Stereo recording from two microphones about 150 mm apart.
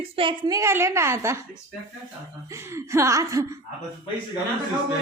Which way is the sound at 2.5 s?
20° right (ahead or behind).